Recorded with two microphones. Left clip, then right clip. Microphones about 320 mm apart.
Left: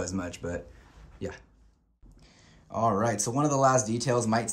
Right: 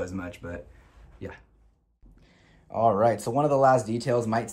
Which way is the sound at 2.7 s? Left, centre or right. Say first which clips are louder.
Right 5 dB; centre.